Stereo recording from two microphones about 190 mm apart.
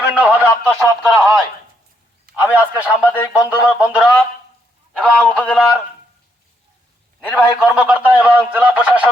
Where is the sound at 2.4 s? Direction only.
10° right (ahead or behind).